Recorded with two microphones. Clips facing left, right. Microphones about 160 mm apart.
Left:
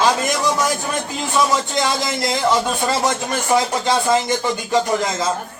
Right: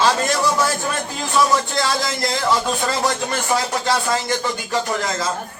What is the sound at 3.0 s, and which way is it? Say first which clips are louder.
Speech: left 1 dB; 20° left (ahead or behind).